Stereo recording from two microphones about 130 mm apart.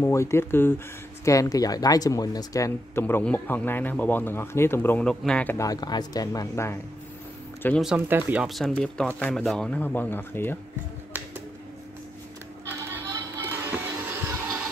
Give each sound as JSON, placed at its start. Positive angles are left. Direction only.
{"t": 0.0, "sound": "speech", "side_deg": 20}
{"t": 5.6, "sound": "speech", "side_deg": 30}
{"t": 8.1, "sound": "speech", "side_deg": -10}
{"t": 8.5, "sound": "speech", "side_deg": 0}
{"t": 12.6, "sound": "music", "side_deg": -20}